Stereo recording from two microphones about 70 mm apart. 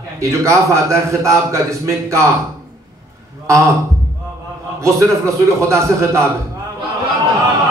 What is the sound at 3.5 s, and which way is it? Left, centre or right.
Speech, right.